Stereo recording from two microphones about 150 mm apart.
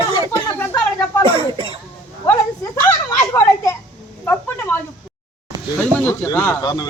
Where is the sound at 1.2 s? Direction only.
40° right (ahead or behind).